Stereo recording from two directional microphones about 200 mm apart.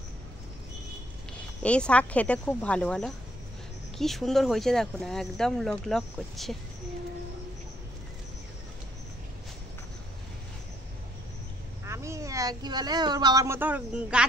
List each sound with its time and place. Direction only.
1.6 s speech: 5° left (ahead or behind)
11.8 s speech: 15° right (ahead or behind)